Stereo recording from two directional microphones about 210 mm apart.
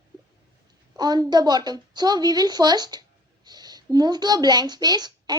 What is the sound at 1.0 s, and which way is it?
A woman's voice, 20° right (ahead or behind).